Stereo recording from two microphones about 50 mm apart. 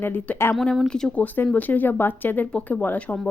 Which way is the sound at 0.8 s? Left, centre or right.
Centre.